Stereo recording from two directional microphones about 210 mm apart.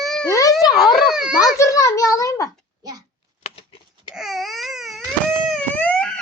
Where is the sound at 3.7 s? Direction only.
25° left (ahead or behind).